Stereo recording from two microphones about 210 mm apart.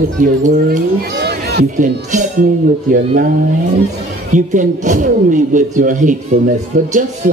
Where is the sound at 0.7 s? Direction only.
50° right (ahead or behind).